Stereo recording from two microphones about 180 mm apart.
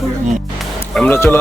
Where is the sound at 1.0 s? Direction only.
10° left (ahead or behind).